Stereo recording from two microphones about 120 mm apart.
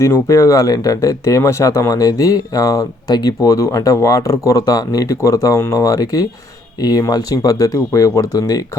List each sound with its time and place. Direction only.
0.0 s speech: 25° left (ahead or behind)